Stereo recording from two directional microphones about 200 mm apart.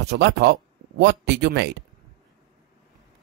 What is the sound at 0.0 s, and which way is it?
Speech, 55° right (ahead or behind).